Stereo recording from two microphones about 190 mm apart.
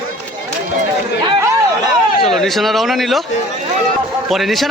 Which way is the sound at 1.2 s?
25° right (ahead or behind).